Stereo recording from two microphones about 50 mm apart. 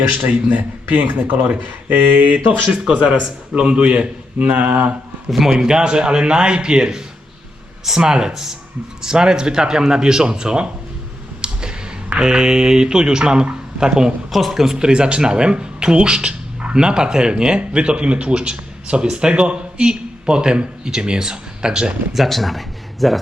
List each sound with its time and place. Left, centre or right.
0.3 s speech: right
2.7 s a man's voice: right
5.3 s speech: centre
11.4 s a sound: centre
12.2 s speech: centre
14.3 s speech: centre
14.8 s a man's voice: centre
22.1 s speech: centre